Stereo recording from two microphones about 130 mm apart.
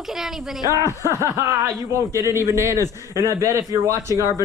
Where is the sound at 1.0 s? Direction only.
20° right (ahead or behind).